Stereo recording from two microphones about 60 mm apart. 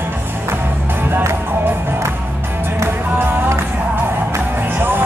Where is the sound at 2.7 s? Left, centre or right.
Right.